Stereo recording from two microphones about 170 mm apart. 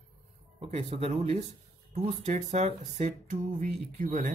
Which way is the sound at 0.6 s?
35° right (ahead or behind).